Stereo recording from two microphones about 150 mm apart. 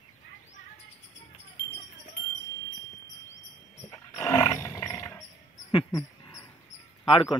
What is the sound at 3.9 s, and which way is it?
Dog, 20° left (ahead or behind).